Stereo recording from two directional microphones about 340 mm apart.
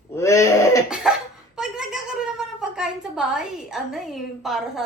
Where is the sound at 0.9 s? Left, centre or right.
Centre.